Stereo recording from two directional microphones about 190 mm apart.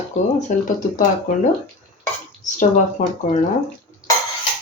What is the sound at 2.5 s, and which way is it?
Speech, 40° left (ahead or behind).